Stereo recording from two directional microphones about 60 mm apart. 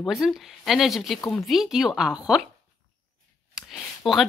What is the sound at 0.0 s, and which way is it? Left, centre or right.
A woman's voice, centre.